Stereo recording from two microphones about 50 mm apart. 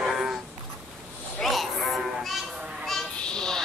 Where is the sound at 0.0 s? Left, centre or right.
Centre.